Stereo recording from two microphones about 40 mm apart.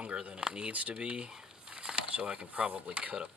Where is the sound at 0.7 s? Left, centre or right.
Right.